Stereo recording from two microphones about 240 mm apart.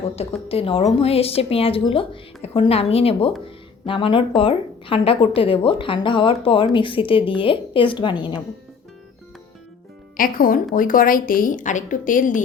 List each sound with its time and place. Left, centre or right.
0.4 s a woman's voice: left
3.4 s a sound: left
4.4 s a woman's voice: left
10.2 s a woman's voice: left